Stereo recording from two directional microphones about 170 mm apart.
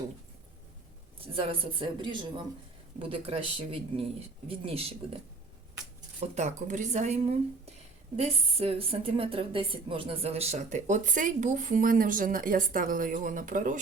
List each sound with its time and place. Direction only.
1.3 s speech: 30° right (ahead or behind)
6.1 s a woman's voice: 45° right (ahead or behind)